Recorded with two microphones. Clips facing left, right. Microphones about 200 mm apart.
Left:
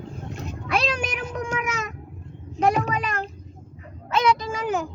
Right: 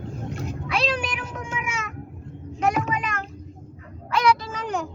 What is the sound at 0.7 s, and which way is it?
Cat, 45° left (ahead or behind).